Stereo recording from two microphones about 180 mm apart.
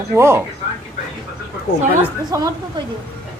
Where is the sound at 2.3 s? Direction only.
15° right (ahead or behind).